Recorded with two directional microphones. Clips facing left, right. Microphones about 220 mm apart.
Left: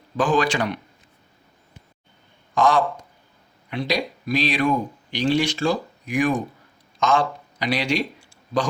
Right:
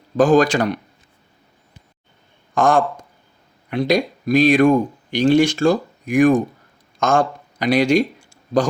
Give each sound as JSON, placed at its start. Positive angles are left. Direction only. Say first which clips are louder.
{"t": 0.2, "sound": "speech", "louder": "right 7 dB", "side_deg": -45}
{"t": 2.6, "sound": "speech", "louder": "right 3 dB", "side_deg": -50}